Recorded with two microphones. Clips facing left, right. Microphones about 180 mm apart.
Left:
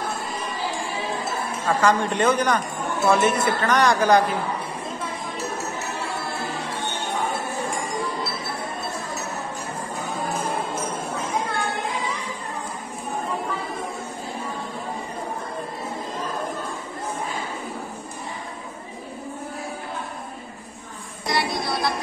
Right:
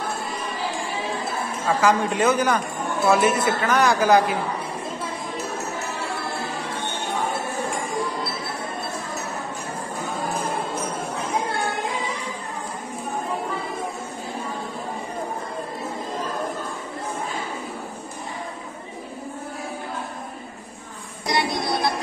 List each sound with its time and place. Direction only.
1.7 s speech: 5° right (ahead or behind)
21.3 s music: 20° right (ahead or behind)